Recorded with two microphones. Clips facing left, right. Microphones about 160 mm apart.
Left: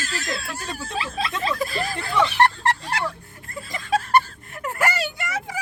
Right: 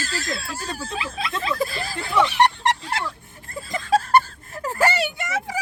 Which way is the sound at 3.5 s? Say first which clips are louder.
Right 3 dB; 30° right (ahead or behind).